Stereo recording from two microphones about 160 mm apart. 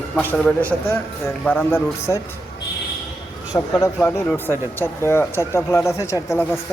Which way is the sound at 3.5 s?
20° left (ahead or behind).